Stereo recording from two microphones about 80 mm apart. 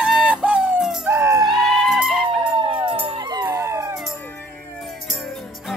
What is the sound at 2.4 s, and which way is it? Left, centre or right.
Howl, right.